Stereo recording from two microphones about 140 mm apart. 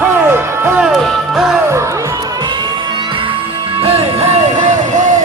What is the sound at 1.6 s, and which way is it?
Music, 20° right (ahead or behind).